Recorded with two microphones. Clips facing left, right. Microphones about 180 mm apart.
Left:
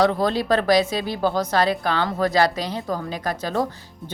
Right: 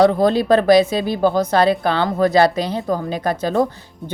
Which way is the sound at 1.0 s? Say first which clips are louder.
Right 5 dB; 55° right (ahead or behind).